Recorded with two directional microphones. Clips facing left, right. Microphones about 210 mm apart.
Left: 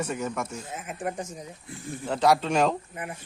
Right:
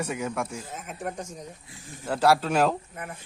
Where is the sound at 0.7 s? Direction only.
5° left (ahead or behind).